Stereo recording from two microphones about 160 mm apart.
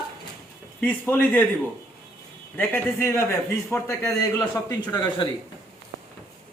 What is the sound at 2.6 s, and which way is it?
A man's voice, 15° left (ahead or behind).